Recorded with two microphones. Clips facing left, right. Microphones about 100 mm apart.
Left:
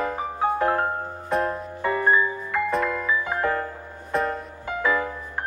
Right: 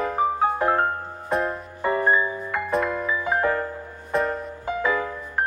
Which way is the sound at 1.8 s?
20° right (ahead or behind).